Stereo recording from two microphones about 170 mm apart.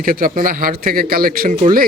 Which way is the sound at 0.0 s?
55° right (ahead or behind).